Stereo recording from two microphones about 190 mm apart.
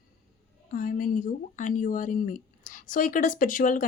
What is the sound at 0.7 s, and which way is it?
Speech, 45° left (ahead or behind).